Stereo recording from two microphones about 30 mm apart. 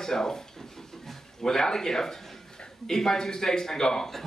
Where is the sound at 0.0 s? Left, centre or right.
Centre.